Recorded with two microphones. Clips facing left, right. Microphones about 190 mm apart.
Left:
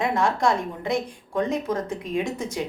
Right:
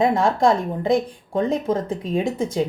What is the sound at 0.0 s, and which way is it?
A woman's voice, 35° right (ahead or behind).